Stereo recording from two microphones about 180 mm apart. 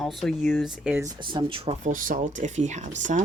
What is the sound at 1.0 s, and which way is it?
Speech, 25° right (ahead or behind).